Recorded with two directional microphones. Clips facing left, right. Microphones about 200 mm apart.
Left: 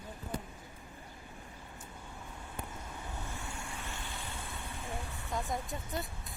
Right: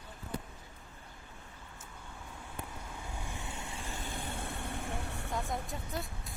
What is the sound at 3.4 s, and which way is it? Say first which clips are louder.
Vehicle: right 1 dB; 20° right (ahead or behind).